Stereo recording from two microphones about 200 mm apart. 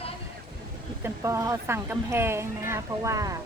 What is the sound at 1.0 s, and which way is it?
Speech, 15° right (ahead or behind).